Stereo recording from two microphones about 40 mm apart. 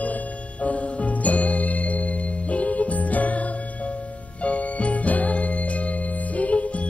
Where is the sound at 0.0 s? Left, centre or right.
Left.